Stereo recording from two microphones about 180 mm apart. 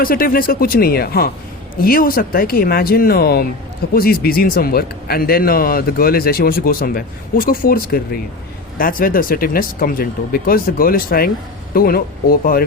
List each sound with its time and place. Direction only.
0.0 s speech: 55° left (ahead or behind)